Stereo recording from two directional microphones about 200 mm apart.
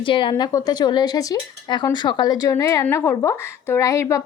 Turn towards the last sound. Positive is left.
turn(degrees=15)  # may be behind; listen again after turning